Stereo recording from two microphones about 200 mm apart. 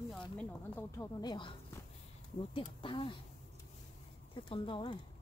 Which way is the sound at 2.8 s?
25° left (ahead or behind).